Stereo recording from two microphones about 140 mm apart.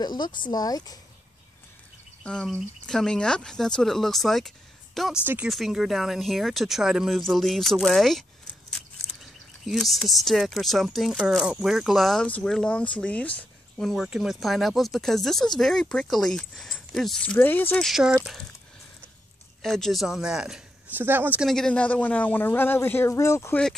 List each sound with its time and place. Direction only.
0.0 s speech: 30° left (ahead or behind)
2.2 s speech: 5° left (ahead or behind)
5.2 s speech: 15° right (ahead or behind)
5.5 s speech: centre (ahead or behind)
8.8 s a sound: 5° left (ahead or behind)
9.7 s speech: centre (ahead or behind)
17.8 s speech: 5° right (ahead or behind)
19.6 s speech: centre (ahead or behind)
21.5 s speech: 5° left (ahead or behind); by 23.6 s 20° left (ahead or behind)